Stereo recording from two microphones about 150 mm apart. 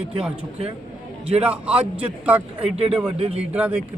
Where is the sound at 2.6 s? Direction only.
40° right (ahead or behind).